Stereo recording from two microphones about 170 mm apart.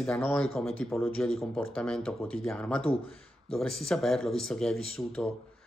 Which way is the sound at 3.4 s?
5° left (ahead or behind).